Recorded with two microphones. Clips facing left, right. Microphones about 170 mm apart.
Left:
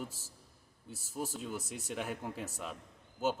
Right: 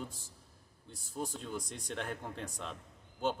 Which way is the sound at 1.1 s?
5° left (ahead or behind).